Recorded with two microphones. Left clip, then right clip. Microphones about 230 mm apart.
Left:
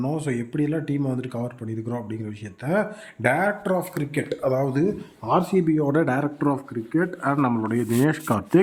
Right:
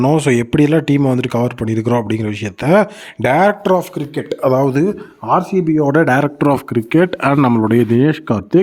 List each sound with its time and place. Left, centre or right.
0.0 s speech: right
7.3 s speech: right
7.9 s speech: centre